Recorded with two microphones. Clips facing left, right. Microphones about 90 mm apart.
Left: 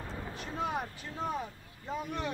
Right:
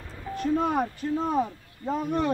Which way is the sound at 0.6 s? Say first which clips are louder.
Right 4 dB; 50° right (ahead or behind).